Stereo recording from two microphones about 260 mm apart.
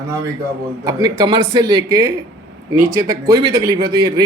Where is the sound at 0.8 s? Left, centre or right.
Centre.